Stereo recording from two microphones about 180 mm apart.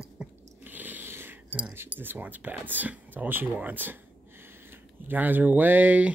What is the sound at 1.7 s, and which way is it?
Speech, 10° right (ahead or behind).